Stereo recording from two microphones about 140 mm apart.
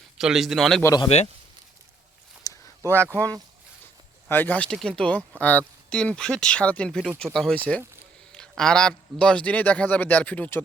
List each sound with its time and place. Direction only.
0.2 s a man's voice: centre (ahead or behind)
0.8 s speech: 20° left (ahead or behind)
1.0 s speech: 50° left (ahead or behind)
2.5 s a sound: 25° left (ahead or behind)
2.8 s speech: 15° right (ahead or behind)
4.3 s a man's voice: 15° left (ahead or behind)